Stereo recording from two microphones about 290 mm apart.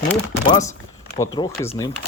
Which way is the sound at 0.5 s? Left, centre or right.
Centre.